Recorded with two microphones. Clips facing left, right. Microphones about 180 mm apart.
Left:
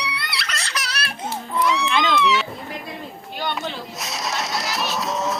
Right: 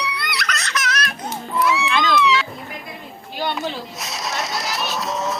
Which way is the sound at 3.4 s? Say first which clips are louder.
Right 3 dB; 5° right (ahead or behind).